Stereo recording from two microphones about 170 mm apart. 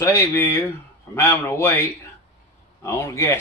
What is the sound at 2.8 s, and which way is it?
Speech, 15° left (ahead or behind).